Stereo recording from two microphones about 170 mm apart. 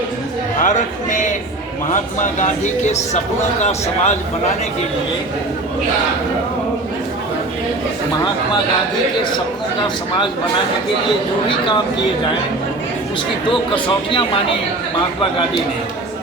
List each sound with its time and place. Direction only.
0.6 s speech: 50° left (ahead or behind)
2.4 s speech: 40° left (ahead or behind)
13.5 s speech: 30° left (ahead or behind)